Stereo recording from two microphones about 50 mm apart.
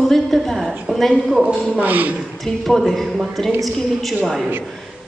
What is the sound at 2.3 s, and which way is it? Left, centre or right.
A man's voice, centre.